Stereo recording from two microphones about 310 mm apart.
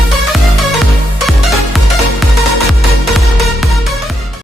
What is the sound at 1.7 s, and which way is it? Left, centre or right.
Music, centre.